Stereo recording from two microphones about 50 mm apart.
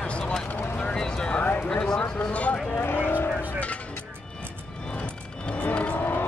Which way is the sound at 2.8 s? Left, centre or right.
Left.